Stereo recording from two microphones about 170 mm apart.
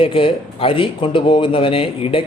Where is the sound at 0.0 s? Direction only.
30° left (ahead or behind).